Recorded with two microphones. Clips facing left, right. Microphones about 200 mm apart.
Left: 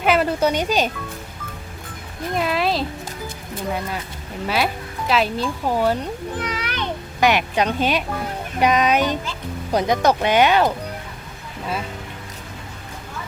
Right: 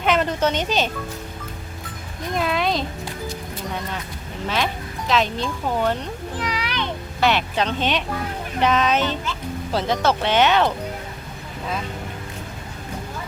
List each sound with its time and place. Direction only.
0.0 s speech: 5° left (ahead or behind)
2.3 s speech: centre (ahead or behind)
4.4 s speech: 10° left (ahead or behind)
6.5 s a sound: 50° left (ahead or behind)
7.2 s speech: 15° left (ahead or behind)